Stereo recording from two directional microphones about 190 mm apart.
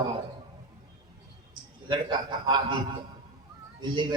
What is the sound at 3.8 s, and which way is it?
Speech, 25° right (ahead or behind).